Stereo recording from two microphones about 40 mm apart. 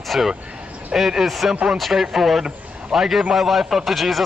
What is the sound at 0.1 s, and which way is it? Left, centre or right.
A man's voice, centre.